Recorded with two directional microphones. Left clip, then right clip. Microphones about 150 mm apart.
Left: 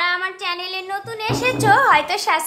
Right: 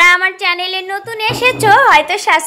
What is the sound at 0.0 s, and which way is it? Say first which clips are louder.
Child singing: right 11 dB; 35° right (ahead or behind).